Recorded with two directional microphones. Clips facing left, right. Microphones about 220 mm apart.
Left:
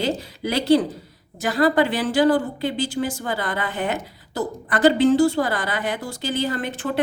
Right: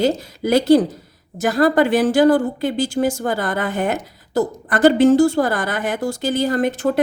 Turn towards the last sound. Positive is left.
turn(degrees=-40)  # may be behind; listen again after turning